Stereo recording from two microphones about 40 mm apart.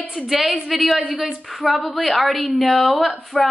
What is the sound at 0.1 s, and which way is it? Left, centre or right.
Speech, centre.